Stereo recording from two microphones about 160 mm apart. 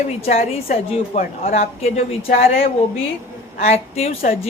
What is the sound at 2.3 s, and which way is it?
Speech, 55° left (ahead or behind).